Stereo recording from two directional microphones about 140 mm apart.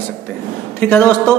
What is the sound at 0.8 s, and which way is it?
Speech, 15° left (ahead or behind).